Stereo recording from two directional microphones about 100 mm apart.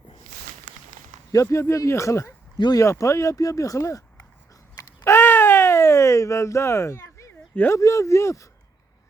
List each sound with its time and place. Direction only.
1.3 s speech: 35° left (ahead or behind)
2.6 s speech: 45° left (ahead or behind)
2.8 s speech: 30° left (ahead or behind)
5.0 s a sound: 25° left (ahead or behind)
7.5 s speech: 20° left (ahead or behind)
7.8 s speech: 30° left (ahead or behind)